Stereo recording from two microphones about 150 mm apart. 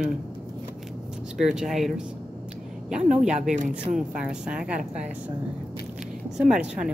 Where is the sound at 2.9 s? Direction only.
50° right (ahead or behind).